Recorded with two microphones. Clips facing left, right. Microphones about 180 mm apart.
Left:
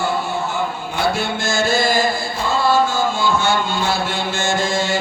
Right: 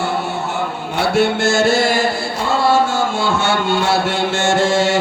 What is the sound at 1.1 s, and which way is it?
Music, 70° right (ahead or behind).